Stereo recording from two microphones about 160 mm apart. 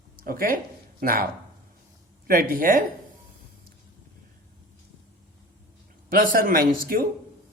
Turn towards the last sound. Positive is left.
turn(degrees=-65)  # may be behind; listen again after turning